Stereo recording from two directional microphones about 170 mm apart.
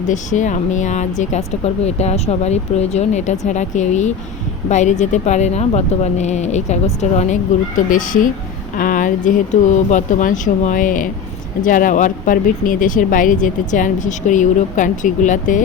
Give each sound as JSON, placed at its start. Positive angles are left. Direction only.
{"t": 0.1, "sound": "speech", "side_deg": 45}
{"t": 7.9, "sound": "speech", "side_deg": 50}